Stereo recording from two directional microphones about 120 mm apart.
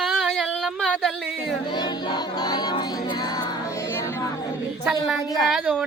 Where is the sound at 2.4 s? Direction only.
35° left (ahead or behind).